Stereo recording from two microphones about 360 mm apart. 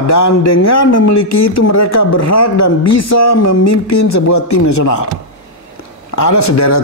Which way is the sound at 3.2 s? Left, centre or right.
Left.